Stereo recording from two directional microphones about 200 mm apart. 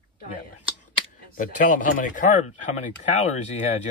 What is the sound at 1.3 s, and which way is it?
Speech, 45° left (ahead or behind).